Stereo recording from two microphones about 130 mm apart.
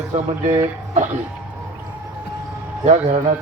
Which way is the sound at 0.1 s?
60° right (ahead or behind).